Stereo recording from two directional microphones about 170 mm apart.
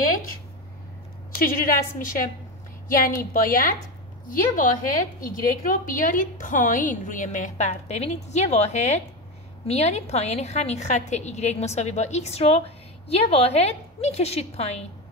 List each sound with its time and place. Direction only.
1.4 s a woman's voice: 55° left (ahead or behind); by 14.9 s 40° left (ahead or behind)